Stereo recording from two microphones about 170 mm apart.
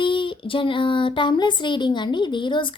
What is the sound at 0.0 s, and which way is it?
A woman's voice, 30° left (ahead or behind).